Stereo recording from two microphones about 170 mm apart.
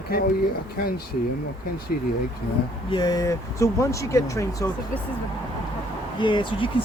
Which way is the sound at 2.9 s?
25° left (ahead or behind).